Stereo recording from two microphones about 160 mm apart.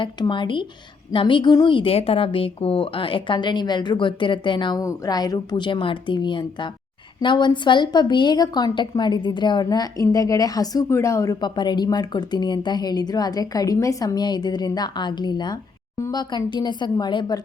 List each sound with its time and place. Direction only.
0.0 s a woman's voice: 30° left (ahead or behind)